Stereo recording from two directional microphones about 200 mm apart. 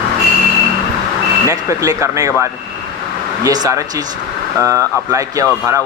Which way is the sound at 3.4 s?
20° right (ahead or behind).